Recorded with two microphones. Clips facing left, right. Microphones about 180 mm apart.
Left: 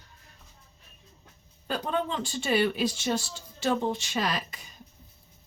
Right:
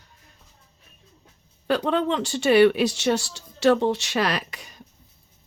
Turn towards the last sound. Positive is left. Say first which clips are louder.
# right 5 dB
turn(degrees=-75)  # may be behind; listen again after turning